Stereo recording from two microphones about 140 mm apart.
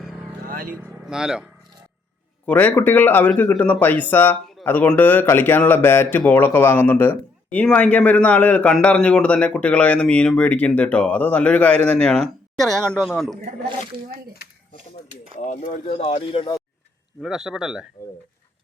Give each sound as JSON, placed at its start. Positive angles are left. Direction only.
{"t": 0.4, "sound": "vehicle", "side_deg": -90}
{"t": 0.7, "sound": "speech", "side_deg": -5}
{"t": 2.5, "sound": "speech", "side_deg": 10}
{"t": 15.1, "sound": "speech", "side_deg": 60}
{"t": 17.2, "sound": "speech", "side_deg": -5}